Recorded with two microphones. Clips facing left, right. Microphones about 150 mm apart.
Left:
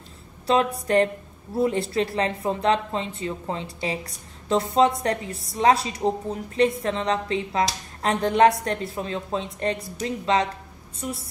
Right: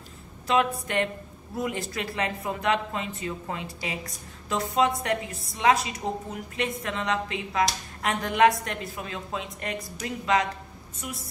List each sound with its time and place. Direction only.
0.5 s a woman's voice: 35° left (ahead or behind)